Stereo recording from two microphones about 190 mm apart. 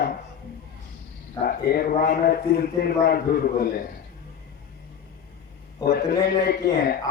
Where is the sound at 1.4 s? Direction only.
50° left (ahead or behind).